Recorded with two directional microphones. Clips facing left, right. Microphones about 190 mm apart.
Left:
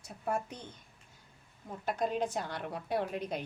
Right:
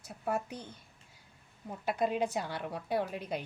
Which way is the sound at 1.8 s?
5° right (ahead or behind).